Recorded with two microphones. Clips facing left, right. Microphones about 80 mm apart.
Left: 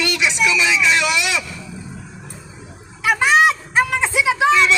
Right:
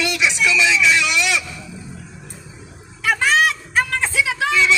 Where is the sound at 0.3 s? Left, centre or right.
Centre.